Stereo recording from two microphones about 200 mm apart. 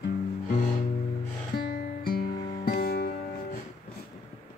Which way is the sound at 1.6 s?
50° left (ahead or behind).